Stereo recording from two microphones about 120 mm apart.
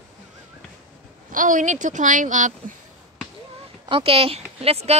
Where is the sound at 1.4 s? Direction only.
90° right.